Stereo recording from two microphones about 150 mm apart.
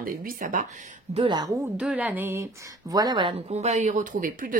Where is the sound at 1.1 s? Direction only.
30° right (ahead or behind).